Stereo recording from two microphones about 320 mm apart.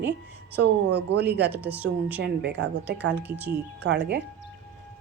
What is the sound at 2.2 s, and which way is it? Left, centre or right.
Speech, right.